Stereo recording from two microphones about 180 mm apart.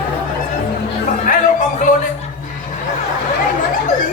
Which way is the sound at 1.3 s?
50° left (ahead or behind).